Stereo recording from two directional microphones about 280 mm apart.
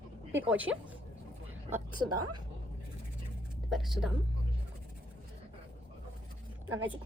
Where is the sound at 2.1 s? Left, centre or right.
Right.